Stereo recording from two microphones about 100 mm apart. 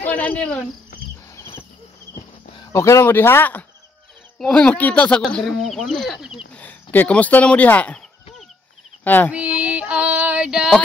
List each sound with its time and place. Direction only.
0.0 s cricket: 15° left (ahead or behind)
1.3 s cricket: 25° left (ahead or behind)
2.7 s speech: 30° left (ahead or behind)
4.4 s speech: 10° left (ahead or behind)
5.2 s speech: centre (ahead or behind)
6.5 s speech: 15° left (ahead or behind)
9.0 s child singing: 20° left (ahead or behind)
9.3 s female singing: 15° right (ahead or behind)